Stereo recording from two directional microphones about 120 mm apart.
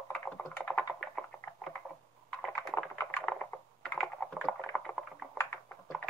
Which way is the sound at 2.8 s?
15° left (ahead or behind).